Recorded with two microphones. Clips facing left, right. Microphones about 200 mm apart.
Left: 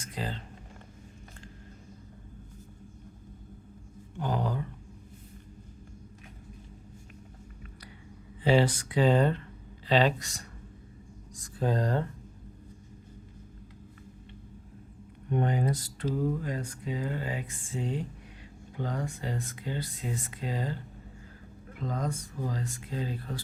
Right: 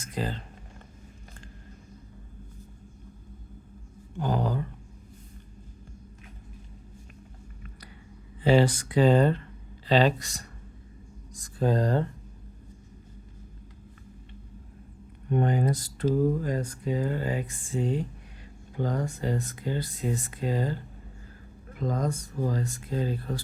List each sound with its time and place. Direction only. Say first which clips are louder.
0.0 s a sound: right 4 dB; 45° right (ahead or behind)
4.2 s a sound: right 3 dB; 40° right (ahead or behind)
8.4 s speech: right 3 dB; 45° right (ahead or behind)
11.3 s speech: right 4 dB; 45° right (ahead or behind)
15.3 s speech: right 3 dB; 45° right (ahead or behind)
21.8 s speech: right 4 dB; 45° right (ahead or behind)